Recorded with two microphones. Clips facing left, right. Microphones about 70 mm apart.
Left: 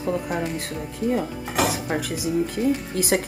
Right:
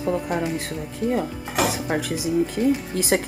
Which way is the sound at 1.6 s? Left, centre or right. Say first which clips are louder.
Right 1 dB; centre.